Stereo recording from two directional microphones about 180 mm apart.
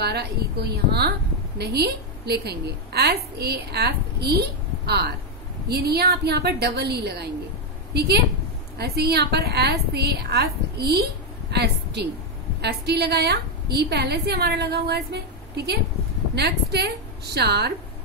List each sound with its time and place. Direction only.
0.0 s a woman's voice: 65° right (ahead or behind)
11.5 s a sound: 65° right (ahead or behind)
12.6 s a woman's voice: 65° right (ahead or behind)